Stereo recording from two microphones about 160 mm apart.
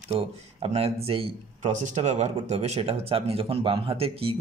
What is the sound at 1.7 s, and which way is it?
Speech, 50° right (ahead or behind).